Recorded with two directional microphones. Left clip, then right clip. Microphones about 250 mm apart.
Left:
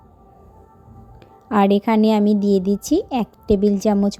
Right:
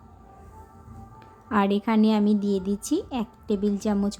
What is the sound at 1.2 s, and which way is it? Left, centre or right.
A woman's voice, centre.